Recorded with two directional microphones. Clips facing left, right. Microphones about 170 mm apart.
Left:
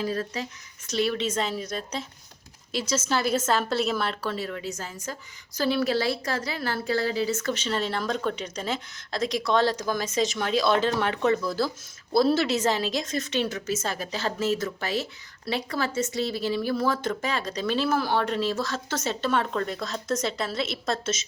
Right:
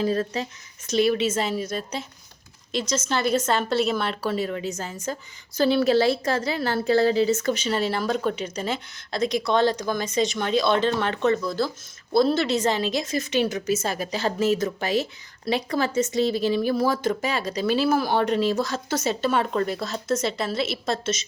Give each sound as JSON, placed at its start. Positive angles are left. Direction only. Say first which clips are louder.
{"t": 0.0, "sound": "a woman's voice", "louder": "right 5 dB", "side_deg": -25}
{"t": 0.9, "sound": "a woman's voice", "louder": "right 5 dB", "side_deg": -15}
{"t": 4.2, "sound": "a woman's voice", "louder": "right 5 dB", "side_deg": -15}